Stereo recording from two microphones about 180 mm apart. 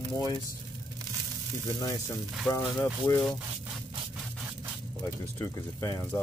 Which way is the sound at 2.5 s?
20° left (ahead or behind).